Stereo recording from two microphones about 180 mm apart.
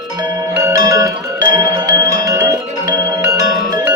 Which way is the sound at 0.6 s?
20° right (ahead or behind).